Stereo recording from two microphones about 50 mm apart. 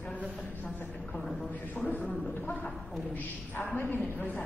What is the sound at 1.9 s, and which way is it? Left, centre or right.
Speech, left.